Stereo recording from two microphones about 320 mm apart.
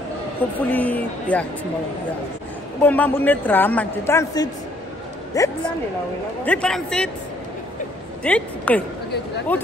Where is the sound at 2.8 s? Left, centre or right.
Centre.